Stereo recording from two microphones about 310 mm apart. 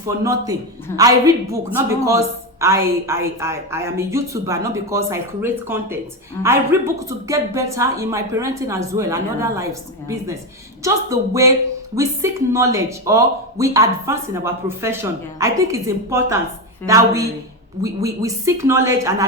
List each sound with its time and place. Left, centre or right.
0.9 s speech: centre
10.8 s speech: centre